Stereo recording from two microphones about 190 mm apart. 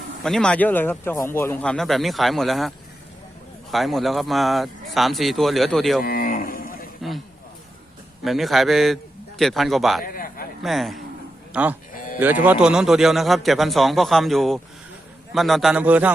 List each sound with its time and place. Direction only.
0.2 s speech: 5° left (ahead or behind)
6.0 s cattle: 50° left (ahead or behind)
8.2 s speech: centre (ahead or behind)
10.0 s a sound: 50° left (ahead or behind)
10.6 s speech: centre (ahead or behind)
11.9 s sheep: 45° left (ahead or behind)
12.2 s speech: 10° right (ahead or behind)